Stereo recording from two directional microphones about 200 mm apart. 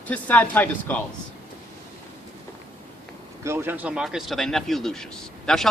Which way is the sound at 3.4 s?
10° right (ahead or behind).